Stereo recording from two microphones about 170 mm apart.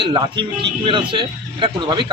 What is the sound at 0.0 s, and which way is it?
A man's voice, 30° right (ahead or behind).